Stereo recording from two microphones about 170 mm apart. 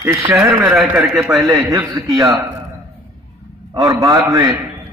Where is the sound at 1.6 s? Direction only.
20° right (ahead or behind).